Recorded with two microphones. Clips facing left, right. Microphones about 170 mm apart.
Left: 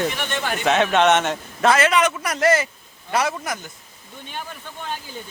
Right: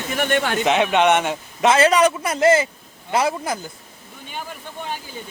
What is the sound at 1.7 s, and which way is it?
A man's voice, 35° right (ahead or behind).